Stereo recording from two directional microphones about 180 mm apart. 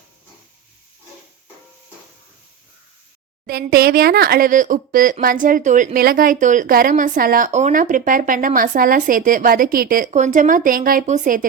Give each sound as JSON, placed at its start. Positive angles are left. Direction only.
{"t": 3.4, "sound": "a woman's voice", "side_deg": -55}